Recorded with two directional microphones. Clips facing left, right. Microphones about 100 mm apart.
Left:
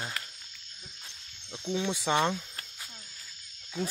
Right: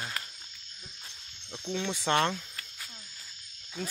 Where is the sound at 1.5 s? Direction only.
10° left (ahead or behind).